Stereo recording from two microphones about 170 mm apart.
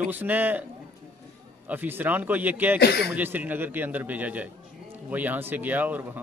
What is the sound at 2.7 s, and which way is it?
Speech, 70° left (ahead or behind).